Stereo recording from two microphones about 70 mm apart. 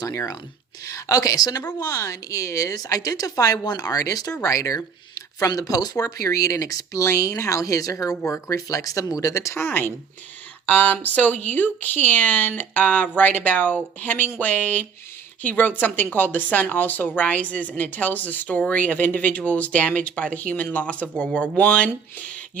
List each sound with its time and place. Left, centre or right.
0.0 s a woman's voice: left; by 21.8 s centre